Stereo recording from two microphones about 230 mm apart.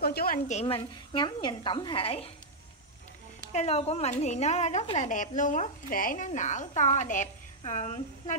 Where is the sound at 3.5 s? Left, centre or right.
Left.